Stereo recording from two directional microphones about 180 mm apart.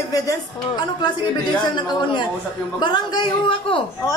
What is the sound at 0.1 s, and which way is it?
A man's voice, 20° left (ahead or behind).